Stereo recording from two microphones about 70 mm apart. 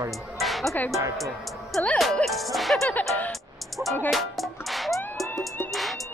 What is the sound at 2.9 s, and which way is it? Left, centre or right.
Speech, left.